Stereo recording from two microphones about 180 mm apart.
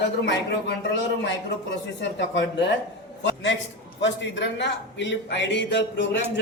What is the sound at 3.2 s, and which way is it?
A man's voice, 90° left.